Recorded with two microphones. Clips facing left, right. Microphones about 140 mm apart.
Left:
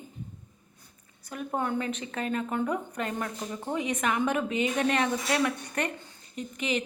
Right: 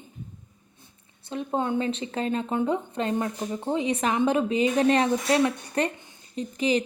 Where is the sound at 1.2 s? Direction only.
25° right (ahead or behind).